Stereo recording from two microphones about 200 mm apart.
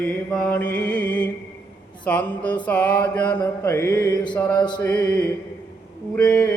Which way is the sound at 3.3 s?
20° left (ahead or behind).